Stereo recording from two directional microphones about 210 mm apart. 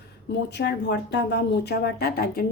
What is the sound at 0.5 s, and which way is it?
Speech, 55° left (ahead or behind).